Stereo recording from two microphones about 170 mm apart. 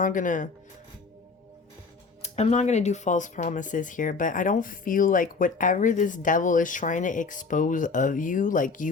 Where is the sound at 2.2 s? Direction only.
40° left (ahead or behind).